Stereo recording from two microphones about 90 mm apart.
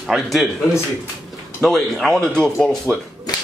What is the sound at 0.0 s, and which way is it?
Speech, centre (ahead or behind).